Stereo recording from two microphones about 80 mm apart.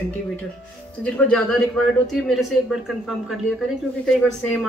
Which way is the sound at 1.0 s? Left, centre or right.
Centre.